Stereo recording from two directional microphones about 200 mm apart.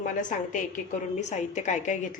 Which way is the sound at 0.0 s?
40° left (ahead or behind).